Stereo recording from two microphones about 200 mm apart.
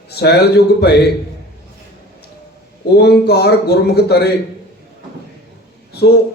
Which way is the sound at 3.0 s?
55° left (ahead or behind).